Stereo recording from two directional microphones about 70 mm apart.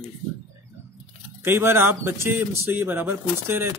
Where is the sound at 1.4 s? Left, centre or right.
Right.